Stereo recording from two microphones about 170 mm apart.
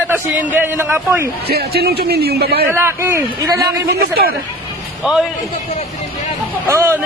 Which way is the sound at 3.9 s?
60° right (ahead or behind).